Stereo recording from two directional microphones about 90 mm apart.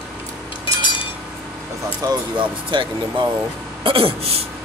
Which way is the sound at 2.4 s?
65° right (ahead or behind).